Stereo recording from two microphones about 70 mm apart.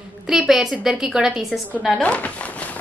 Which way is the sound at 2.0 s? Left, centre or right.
Centre.